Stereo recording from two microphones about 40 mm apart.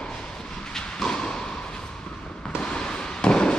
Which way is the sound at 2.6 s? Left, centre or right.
Left.